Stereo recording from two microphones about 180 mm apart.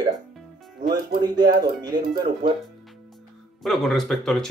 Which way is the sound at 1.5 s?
25° right (ahead or behind).